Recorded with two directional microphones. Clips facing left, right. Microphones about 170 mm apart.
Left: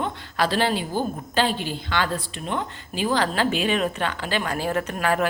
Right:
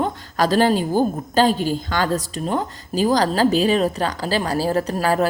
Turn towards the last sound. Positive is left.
turn(degrees=-35)  # may be behind; listen again after turning